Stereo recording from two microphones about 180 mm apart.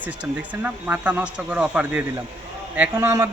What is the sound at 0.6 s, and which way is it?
A man's voice, 10° right (ahead or behind).